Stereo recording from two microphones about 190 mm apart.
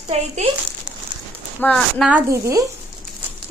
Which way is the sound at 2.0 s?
10° right (ahead or behind).